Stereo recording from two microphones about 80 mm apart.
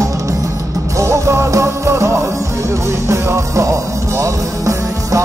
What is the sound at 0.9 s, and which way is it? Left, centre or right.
Music, right.